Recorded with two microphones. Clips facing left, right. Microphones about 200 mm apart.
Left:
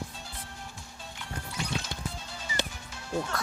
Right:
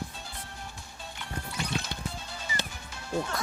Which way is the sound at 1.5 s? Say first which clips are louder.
Right 1 dB; 60° right (ahead or behind).